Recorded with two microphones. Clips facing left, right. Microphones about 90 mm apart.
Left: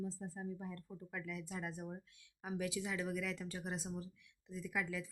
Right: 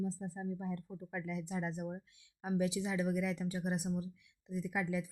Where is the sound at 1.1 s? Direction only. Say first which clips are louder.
Right 6 dB; 20° right (ahead or behind).